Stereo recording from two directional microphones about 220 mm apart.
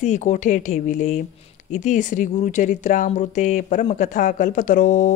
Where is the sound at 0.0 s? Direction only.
35° left (ahead or behind).